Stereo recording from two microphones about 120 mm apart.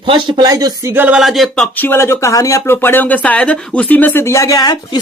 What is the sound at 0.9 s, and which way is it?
Speech, 15° right (ahead or behind).